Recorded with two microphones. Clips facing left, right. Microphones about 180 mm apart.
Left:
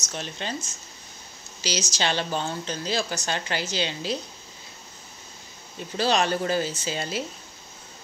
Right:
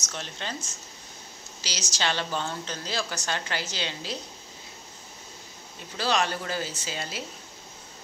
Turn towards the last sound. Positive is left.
turn(degrees=25)  # may be behind; listen again after turning